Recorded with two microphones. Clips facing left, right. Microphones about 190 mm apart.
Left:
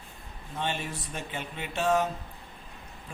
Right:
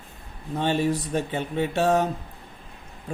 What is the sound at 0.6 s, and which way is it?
Speech, 40° right (ahead or behind).